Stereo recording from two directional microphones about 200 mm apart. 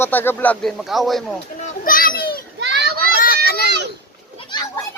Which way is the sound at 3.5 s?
50° left (ahead or behind).